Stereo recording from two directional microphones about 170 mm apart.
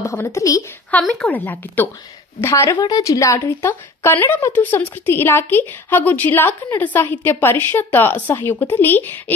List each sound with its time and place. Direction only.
0.0 s a woman's voice: 15° left (ahead or behind)
0.9 s a woman's voice: 5° left (ahead or behind)